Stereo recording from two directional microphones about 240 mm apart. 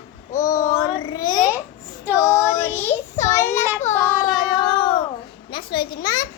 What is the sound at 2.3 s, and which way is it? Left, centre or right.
Child singing, centre.